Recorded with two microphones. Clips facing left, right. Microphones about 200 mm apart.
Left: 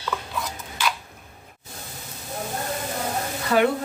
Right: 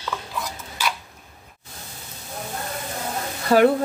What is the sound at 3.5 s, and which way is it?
Speech, 40° right (ahead or behind).